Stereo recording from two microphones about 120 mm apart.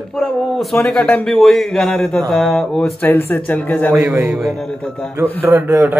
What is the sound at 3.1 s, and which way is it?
Speech, 20° left (ahead or behind).